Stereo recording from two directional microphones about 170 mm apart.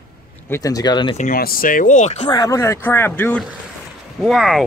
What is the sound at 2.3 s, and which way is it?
Speech, 20° left (ahead or behind).